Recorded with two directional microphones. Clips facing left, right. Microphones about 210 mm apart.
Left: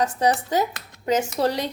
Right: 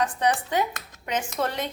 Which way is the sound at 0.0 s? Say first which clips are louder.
Left 3 dB; 40° left (ahead or behind).